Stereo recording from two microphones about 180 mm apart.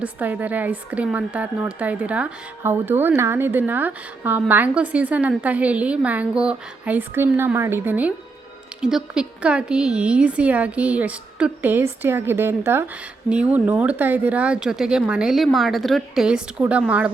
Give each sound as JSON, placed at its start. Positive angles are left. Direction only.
{"t": 0.0, "sound": "a woman's voice", "side_deg": -10}